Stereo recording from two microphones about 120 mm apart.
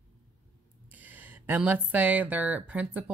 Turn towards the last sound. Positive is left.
turn(degrees=-10)  # may be behind; listen again after turning